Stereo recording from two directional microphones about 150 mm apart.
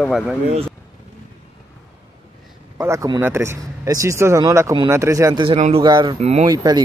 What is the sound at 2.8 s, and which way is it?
Speech, 20° right (ahead or behind).